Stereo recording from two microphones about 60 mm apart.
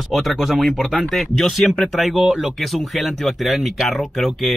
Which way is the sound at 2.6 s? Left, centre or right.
Centre.